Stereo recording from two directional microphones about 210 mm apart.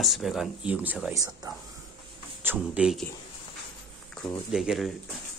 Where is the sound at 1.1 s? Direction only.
15° right (ahead or behind).